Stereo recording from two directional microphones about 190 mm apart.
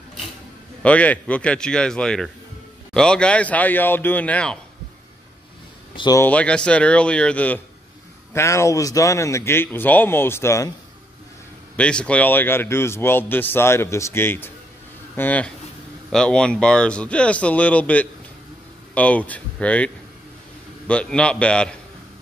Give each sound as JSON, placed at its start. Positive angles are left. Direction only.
{"t": 0.8, "sound": "speech", "side_deg": 5}
{"t": 5.9, "sound": "speech", "side_deg": 20}
{"t": 6.2, "sound": "speech", "side_deg": 5}
{"t": 11.7, "sound": "speech", "side_deg": 5}